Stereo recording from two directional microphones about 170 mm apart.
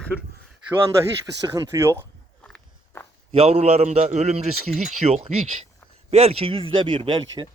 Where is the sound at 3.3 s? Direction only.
40° right (ahead or behind).